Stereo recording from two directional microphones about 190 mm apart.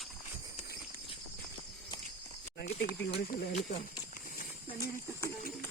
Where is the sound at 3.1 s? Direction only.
40° left (ahead or behind).